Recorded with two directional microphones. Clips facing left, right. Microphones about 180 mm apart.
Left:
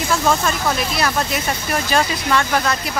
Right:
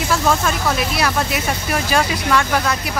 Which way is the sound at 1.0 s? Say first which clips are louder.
Right 1 dB; 5° right (ahead or behind).